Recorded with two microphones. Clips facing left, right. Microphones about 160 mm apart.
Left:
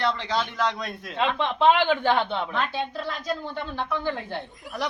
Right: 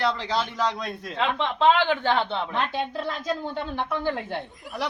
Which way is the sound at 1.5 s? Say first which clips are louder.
Even; 15° left (ahead or behind).